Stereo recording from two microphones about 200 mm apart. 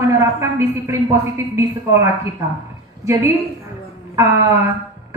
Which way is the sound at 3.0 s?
15° right (ahead or behind).